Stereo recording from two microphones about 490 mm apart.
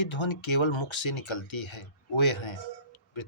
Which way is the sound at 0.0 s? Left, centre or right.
Left.